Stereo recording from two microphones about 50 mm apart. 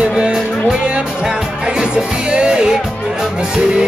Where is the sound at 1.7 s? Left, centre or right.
Centre.